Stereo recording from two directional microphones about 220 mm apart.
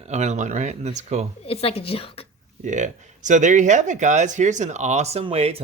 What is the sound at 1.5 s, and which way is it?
Speech, 25° left (ahead or behind).